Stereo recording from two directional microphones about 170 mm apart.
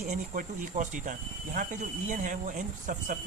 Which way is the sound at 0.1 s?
50° right (ahead or behind).